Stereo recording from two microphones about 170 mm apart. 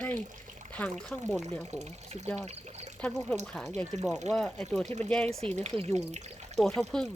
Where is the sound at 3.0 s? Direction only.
5° left (ahead or behind).